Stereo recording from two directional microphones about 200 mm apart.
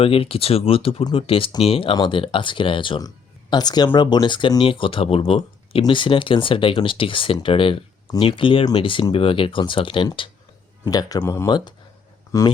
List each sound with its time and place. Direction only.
0.0 s speech: 30° left (ahead or behind)